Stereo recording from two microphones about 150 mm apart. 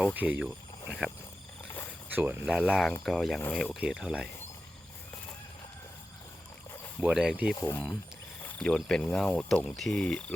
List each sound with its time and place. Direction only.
0.0 s speech: 10° right (ahead or behind)
2.1 s speech: 10° right (ahead or behind)
7.0 s speech: 5° right (ahead or behind)
7.5 s speech: 20° left (ahead or behind)
8.4 s speech: 5° left (ahead or behind)